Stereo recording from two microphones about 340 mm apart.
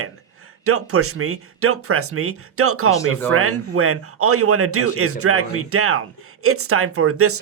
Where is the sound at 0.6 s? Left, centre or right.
Right.